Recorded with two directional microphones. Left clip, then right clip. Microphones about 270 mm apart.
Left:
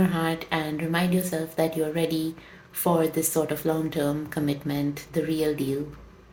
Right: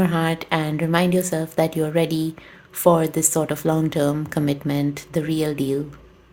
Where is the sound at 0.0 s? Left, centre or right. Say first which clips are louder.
Right 4 dB; right.